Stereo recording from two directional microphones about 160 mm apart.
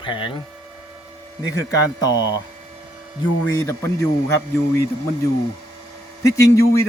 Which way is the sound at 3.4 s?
20° left (ahead or behind).